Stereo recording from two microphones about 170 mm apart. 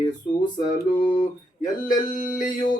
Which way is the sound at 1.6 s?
25° left (ahead or behind).